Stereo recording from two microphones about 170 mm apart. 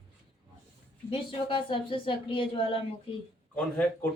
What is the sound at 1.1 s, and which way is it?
A woman's voice, 30° left (ahead or behind).